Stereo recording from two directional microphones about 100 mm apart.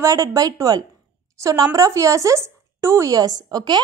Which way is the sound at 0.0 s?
35° right (ahead or behind).